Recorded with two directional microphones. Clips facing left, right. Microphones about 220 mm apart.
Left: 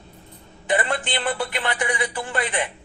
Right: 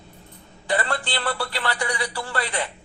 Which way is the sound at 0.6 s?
20° left (ahead or behind).